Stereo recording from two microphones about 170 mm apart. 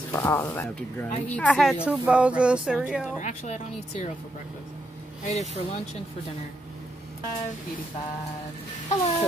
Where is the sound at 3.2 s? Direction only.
40° left (ahead or behind).